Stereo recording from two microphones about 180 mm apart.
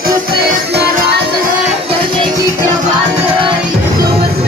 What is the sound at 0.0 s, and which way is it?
Music, 60° right (ahead or behind).